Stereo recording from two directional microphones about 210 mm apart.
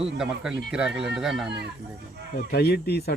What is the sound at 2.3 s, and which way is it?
Speech, 50° left (ahead or behind).